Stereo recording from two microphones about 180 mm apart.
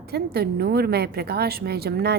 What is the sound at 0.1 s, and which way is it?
A woman's voice, 60° right (ahead or behind).